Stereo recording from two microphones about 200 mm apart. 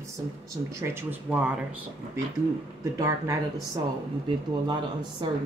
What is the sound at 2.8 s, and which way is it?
Speech, 15° right (ahead or behind).